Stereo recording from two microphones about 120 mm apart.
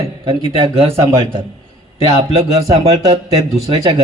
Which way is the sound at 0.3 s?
40° right (ahead or behind).